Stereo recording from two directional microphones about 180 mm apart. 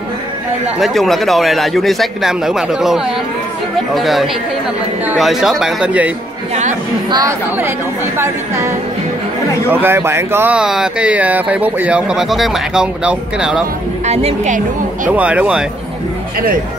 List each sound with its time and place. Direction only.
0.7 s speech: centre (ahead or behind)
7.1 s speech: 20° right (ahead or behind); by 13.7 s 5° right (ahead or behind)
14.0 s a woman's voice: 35° right (ahead or behind)
15.0 s speech: 5° right (ahead or behind)